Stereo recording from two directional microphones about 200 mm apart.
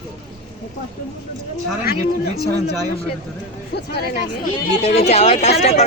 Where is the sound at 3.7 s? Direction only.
50° left (ahead or behind).